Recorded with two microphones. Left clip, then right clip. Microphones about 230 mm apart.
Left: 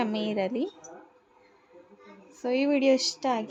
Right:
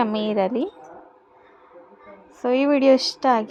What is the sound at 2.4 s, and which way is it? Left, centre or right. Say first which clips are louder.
A woman's voice: right 7 dB; centre.